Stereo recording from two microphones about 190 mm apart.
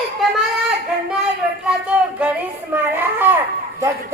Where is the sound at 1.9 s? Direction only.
5° right (ahead or behind).